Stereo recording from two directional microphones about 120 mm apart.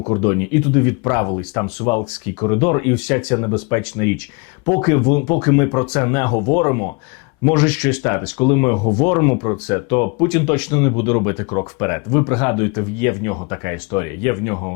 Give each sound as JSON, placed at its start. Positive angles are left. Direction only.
{"t": 0.0, "sound": "speech", "side_deg": 30}